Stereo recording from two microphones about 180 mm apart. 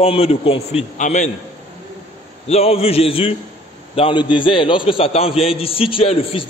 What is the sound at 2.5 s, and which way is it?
A man's voice, 35° left (ahead or behind).